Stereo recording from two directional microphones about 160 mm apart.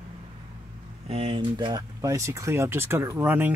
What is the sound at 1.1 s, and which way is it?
Speech, 35° right (ahead or behind).